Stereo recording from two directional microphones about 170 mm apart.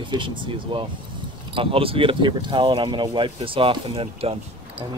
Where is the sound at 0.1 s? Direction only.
30° right (ahead or behind).